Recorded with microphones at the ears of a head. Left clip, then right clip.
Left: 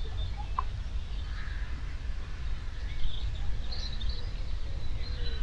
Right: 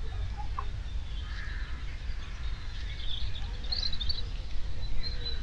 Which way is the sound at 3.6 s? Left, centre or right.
Right.